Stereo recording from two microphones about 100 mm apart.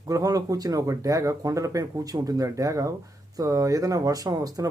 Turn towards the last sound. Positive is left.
turn(degrees=-40)  # may be behind; listen again after turning